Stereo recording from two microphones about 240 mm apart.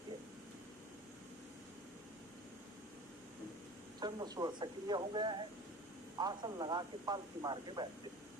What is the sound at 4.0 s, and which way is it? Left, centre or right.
Speech, centre.